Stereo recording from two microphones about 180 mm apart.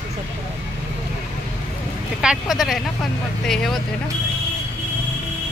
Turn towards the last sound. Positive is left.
turn(degrees=0)  # may be behind; listen again after turning